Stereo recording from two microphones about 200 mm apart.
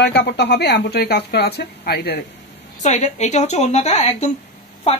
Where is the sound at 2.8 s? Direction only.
35° left (ahead or behind).